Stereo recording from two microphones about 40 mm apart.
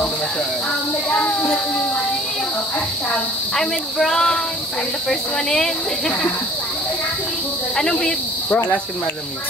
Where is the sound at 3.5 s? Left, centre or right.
Centre.